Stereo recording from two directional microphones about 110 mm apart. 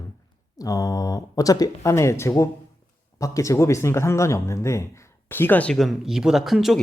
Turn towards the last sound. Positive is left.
turn(degrees=0)  # may be behind; listen again after turning